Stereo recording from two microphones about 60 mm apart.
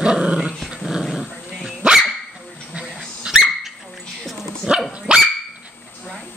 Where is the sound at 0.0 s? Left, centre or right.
Centre.